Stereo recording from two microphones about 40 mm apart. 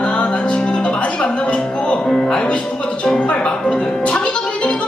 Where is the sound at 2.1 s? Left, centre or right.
Centre.